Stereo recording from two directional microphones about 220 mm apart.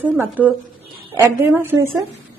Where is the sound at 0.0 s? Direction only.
5° right (ahead or behind).